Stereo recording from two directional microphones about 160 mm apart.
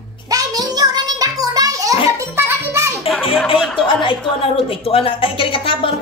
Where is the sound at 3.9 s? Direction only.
30° left (ahead or behind).